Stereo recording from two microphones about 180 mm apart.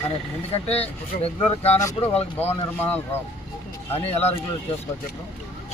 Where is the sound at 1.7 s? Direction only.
15° left (ahead or behind).